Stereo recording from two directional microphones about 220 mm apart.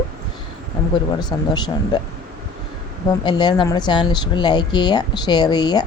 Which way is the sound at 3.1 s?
20° left (ahead or behind).